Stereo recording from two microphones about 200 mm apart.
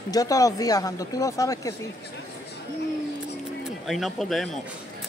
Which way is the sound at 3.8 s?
Centre (ahead or behind).